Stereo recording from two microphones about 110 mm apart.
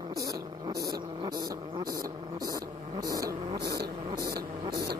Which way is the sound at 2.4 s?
35° right (ahead or behind).